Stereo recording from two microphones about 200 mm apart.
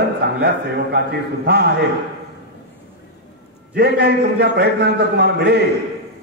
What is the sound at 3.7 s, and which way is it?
A man's voice, 55° right (ahead or behind).